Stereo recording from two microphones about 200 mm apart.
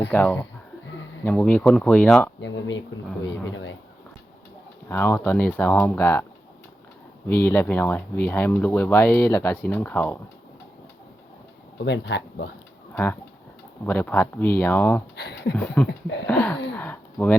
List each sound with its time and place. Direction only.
0.1 s speech: 10° left (ahead or behind)
2.4 s speech: 65° left (ahead or behind)
4.9 s speech: 10° left (ahead or behind)
7.3 s speech: 10° left (ahead or behind)
11.9 s speech: 60° left (ahead or behind)
12.9 s speech: 10° left (ahead or behind)
15.1 s speech: 55° left (ahead or behind)
15.5 s speech: 5° left (ahead or behind)
15.9 s speech: 60° left (ahead or behind)
16.2 s speech: 5° left (ahead or behind)